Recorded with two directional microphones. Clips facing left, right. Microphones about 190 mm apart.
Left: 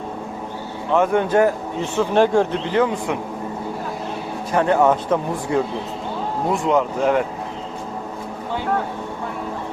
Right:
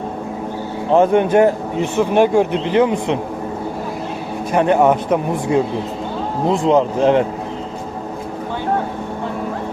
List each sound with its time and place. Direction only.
0.9 s speech: 30° right (ahead or behind)
1.1 s speech: 20° right (ahead or behind)
4.5 s speech: 20° right (ahead or behind)
6.5 s speech: 25° right (ahead or behind)